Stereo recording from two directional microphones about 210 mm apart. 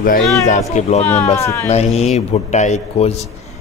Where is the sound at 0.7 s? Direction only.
30° left (ahead or behind).